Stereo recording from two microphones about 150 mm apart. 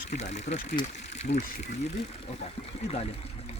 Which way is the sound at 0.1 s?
50° left (ahead or behind).